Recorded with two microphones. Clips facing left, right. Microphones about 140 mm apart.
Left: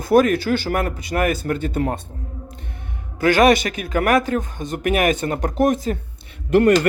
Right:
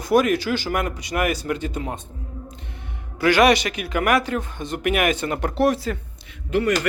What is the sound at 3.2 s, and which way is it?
A man's voice, 45° left (ahead or behind).